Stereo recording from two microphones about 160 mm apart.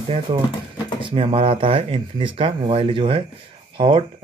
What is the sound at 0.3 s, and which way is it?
Speech, 35° right (ahead or behind).